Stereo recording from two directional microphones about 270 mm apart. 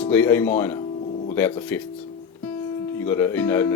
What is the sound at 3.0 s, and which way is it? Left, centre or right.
Speech, centre.